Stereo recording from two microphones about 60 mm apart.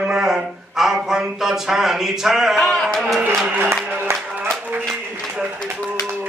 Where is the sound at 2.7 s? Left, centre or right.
Centre.